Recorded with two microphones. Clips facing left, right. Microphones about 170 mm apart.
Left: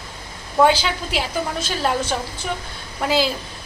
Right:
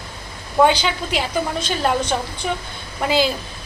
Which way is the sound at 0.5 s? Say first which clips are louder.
Right 1 dB; centre (ahead or behind).